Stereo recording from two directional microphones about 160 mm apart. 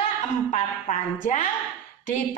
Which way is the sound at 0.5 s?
55° left (ahead or behind).